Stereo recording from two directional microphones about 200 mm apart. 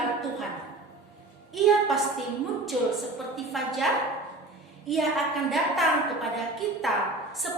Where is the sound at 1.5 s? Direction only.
Centre (ahead or behind).